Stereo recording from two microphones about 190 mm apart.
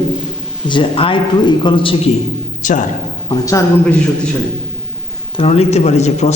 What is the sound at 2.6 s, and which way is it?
Speech, 45° left (ahead or behind).